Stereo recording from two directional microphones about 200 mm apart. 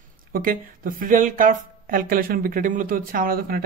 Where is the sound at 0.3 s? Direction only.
45° right (ahead or behind).